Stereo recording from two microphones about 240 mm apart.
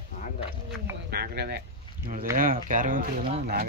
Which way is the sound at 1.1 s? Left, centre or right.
Right.